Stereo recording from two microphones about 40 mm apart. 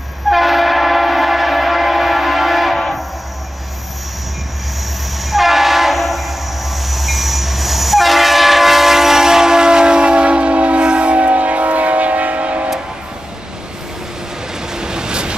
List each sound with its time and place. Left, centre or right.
0.3 s train: centre
5.3 s train horn: centre
6.9 s train: centre; by 12.6 s right
14.7 s train: centre